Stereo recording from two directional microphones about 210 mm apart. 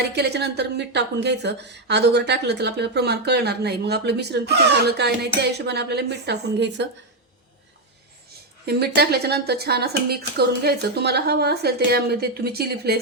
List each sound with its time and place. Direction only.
0.2 s a woman's voice: 50° right (ahead or behind)
8.6 s a woman's voice: 50° right (ahead or behind)